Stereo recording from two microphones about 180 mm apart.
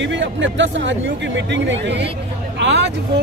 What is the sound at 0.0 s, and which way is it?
Speech, 90° right.